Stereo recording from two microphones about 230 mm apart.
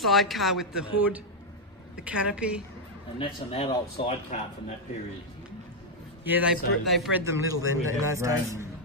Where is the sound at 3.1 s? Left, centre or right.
Left.